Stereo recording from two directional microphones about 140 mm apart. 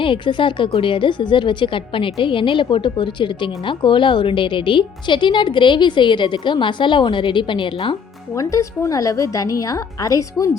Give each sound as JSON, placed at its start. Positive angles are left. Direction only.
{"t": 0.0, "sound": "a woman's voice", "side_deg": 35}
{"t": 8.4, "sound": "a woman's voice", "side_deg": 25}